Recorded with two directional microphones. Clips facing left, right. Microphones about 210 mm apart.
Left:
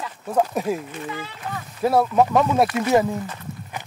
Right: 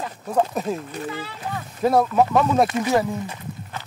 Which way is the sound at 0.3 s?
10° left (ahead or behind).